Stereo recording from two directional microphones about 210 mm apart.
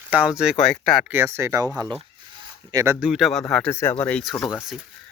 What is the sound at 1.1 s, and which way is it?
Speech, 10° right (ahead or behind).